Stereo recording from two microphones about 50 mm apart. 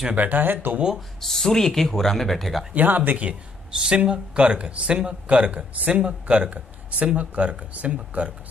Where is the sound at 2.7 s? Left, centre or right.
Right.